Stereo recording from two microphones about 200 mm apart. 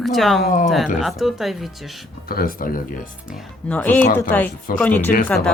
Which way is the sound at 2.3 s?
45° left (ahead or behind).